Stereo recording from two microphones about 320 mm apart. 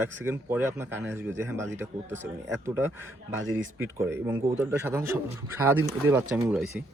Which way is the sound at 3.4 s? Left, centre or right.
Right.